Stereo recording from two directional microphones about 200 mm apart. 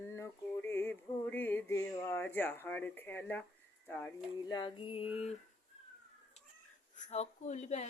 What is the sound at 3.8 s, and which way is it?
Speech, 10° left (ahead or behind).